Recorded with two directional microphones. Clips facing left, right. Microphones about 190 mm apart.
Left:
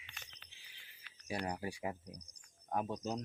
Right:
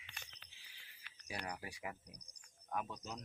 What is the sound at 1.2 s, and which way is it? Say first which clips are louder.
Speech: left 7 dB; 30° left (ahead or behind).